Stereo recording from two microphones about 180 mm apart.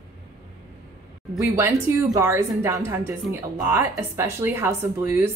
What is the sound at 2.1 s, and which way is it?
Speech, 15° right (ahead or behind).